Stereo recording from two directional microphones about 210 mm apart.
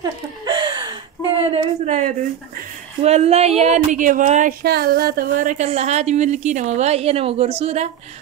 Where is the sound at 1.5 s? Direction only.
30° right (ahead or behind).